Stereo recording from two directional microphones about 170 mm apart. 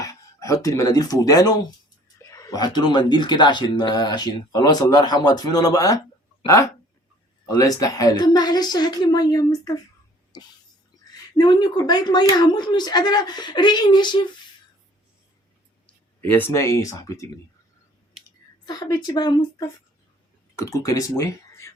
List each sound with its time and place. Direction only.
0.0 s speech: 20° left (ahead or behind)
7.4 s speech: 20° left (ahead or behind)
10.3 s cough: 20° left (ahead or behind)
11.3 s speech: 25° left (ahead or behind)
16.3 s speech: 15° left (ahead or behind)
18.6 s speech: 25° left (ahead or behind)